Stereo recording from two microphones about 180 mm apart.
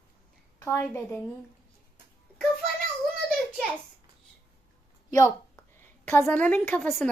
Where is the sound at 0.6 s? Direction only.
15° left (ahead or behind).